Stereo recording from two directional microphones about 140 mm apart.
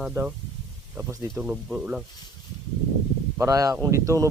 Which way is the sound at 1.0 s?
20° right (ahead or behind).